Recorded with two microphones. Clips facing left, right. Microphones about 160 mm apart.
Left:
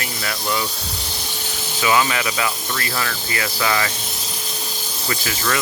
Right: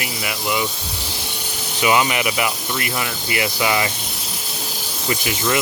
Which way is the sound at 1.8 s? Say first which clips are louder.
Right 1 dB; 20° right (ahead or behind).